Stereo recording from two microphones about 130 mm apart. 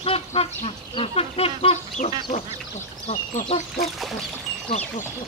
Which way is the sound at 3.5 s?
65° left (ahead or behind).